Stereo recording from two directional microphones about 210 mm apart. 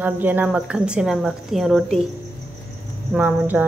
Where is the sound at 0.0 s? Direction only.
10° right (ahead or behind).